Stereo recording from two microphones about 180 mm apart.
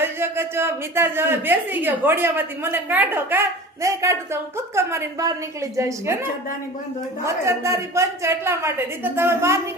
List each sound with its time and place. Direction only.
0.0 s a woman's voice: 15° right (ahead or behind)
7.3 s a woman's voice: 15° right (ahead or behind)